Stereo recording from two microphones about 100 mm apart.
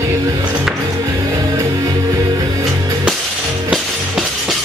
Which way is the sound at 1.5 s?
35° right (ahead or behind).